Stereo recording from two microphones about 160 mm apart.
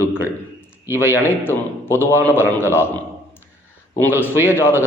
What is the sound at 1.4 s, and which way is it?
A man's voice, 15° left (ahead or behind).